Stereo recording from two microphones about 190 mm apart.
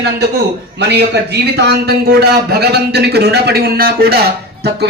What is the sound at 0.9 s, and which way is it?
A man's voice, 60° right (ahead or behind).